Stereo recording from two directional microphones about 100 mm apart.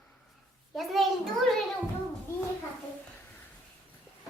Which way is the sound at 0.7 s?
Centre (ahead or behind).